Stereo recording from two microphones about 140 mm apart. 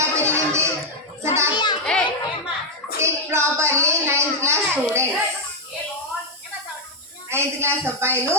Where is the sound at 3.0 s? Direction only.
20° right (ahead or behind).